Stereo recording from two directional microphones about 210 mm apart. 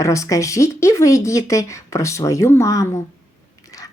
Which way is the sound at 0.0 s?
15° left (ahead or behind).